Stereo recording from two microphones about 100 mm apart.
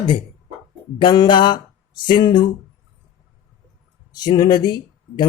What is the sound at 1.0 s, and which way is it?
Speech, 50° left (ahead or behind).